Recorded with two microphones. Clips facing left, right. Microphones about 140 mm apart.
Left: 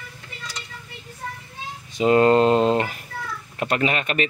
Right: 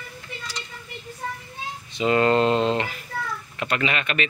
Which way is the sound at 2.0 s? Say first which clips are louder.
Left 4 dB; 40° left (ahead or behind).